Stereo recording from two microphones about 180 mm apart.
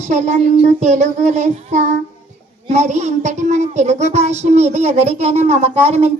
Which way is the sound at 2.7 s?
40° right (ahead or behind).